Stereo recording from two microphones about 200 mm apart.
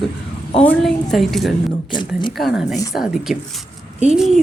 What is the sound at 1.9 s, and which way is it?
Speech, 25° left (ahead or behind).